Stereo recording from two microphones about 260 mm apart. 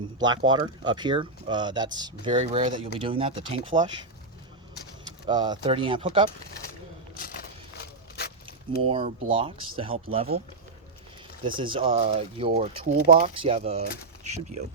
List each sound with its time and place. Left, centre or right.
0.2 s speech: centre
5.3 s speech: centre
7.2 s a sound: left
8.9 s speech: right
11.6 s speech: centre